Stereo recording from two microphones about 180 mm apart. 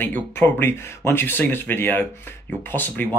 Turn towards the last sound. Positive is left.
turn(degrees=10)  # may be behind; listen again after turning